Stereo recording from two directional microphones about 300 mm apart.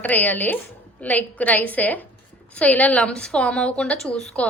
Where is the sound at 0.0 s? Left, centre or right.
Centre.